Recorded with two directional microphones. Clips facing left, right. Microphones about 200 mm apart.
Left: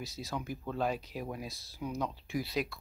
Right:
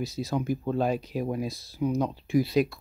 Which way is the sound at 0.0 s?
15° right (ahead or behind).